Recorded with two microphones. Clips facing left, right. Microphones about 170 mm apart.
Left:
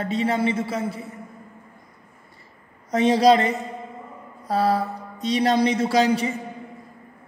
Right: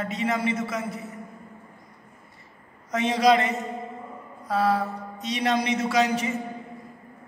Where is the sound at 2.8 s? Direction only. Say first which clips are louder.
Left 4 dB; 35° left (ahead or behind).